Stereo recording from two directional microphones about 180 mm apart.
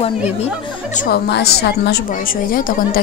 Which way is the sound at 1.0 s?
65° left (ahead or behind).